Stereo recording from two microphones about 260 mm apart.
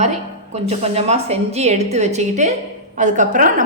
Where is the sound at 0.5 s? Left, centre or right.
Right.